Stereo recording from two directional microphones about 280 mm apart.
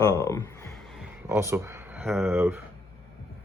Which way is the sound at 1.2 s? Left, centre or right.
Centre.